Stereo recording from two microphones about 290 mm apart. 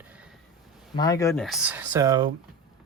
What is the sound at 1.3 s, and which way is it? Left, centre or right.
Speech, centre.